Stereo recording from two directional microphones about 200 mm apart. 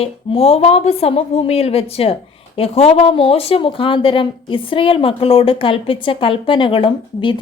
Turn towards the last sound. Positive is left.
turn(degrees=25)  # may be behind; listen again after turning